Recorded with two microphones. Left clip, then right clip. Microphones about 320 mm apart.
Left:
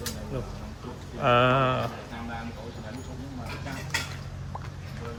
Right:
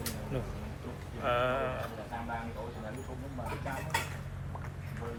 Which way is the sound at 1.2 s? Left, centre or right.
Left.